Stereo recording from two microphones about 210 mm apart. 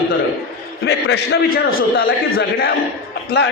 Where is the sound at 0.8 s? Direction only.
50° left (ahead or behind).